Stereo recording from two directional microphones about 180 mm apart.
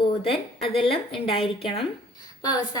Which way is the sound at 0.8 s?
30° left (ahead or behind).